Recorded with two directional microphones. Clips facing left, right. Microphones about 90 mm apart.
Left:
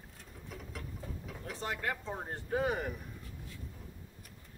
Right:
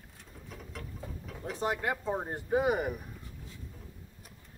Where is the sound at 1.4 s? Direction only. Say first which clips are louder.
Right 5 dB; 20° right (ahead or behind).